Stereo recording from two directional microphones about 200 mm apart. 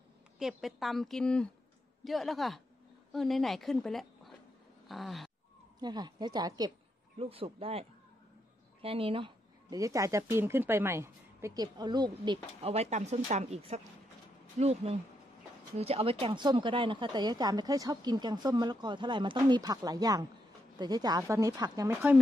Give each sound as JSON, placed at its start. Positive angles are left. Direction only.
{"t": 0.4, "sound": "a woman's voice", "side_deg": 0}
{"t": 4.8, "sound": "a sound", "side_deg": 0}
{"t": 5.8, "sound": "speech", "side_deg": -20}
{"t": 8.8, "sound": "a woman's voice", "side_deg": -30}